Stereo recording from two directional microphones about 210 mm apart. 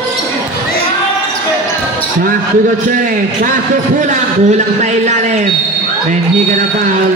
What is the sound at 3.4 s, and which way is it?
A man's voice, 35° right (ahead or behind).